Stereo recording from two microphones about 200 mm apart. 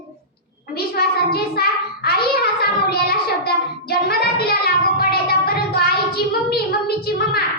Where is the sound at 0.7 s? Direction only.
50° left (ahead or behind).